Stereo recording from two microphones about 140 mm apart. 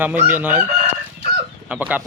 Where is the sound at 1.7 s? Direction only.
10° right (ahead or behind).